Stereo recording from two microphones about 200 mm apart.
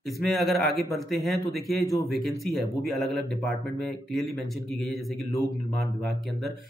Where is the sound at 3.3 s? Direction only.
5° left (ahead or behind).